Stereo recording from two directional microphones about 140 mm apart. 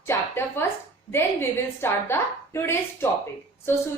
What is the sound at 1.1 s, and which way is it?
A woman's voice, 15° left (ahead or behind).